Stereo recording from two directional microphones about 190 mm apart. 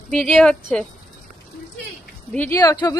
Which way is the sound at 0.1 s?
5° left (ahead or behind).